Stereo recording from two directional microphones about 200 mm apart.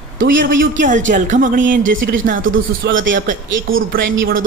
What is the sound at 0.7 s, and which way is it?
Speech, 40° right (ahead or behind).